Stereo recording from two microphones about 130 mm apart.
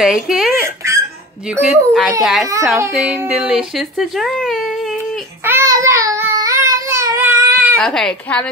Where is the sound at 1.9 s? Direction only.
Centre (ahead or behind).